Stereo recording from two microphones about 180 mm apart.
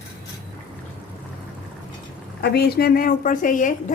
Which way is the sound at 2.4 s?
65° left (ahead or behind).